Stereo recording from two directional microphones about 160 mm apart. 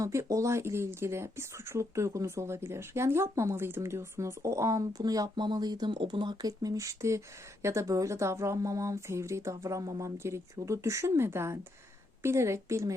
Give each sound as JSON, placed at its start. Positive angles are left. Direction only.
{"t": 0.0, "sound": "speech", "side_deg": -20}